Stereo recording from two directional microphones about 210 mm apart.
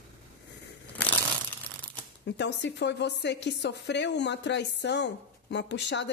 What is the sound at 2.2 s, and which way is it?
Speech, 55° left (ahead or behind).